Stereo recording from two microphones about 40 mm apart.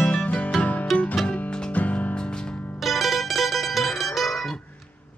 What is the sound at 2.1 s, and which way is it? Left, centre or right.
Music, left.